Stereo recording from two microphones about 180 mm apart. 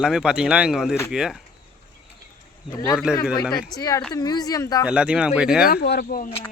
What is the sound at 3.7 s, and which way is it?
Speech, 20° left (ahead or behind).